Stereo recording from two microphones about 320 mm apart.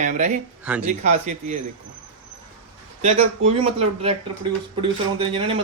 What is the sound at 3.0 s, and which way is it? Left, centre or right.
Speech, right.